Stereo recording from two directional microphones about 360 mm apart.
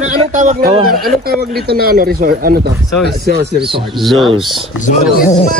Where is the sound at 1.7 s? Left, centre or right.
Right.